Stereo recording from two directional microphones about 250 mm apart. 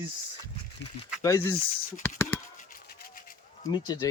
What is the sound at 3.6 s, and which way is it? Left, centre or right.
Speech, centre.